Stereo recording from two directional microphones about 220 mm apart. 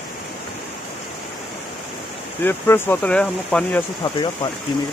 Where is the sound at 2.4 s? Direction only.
10° left (ahead or behind).